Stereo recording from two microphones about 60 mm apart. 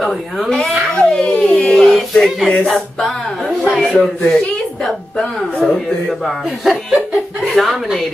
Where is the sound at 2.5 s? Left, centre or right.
Centre.